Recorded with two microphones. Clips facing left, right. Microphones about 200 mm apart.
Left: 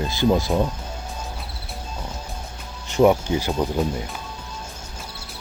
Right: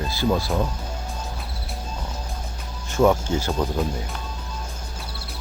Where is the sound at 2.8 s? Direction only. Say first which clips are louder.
Left 2 dB; 15° left (ahead or behind).